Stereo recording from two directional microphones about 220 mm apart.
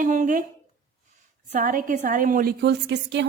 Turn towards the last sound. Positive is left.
turn(degrees=-50)  # may be behind; listen again after turning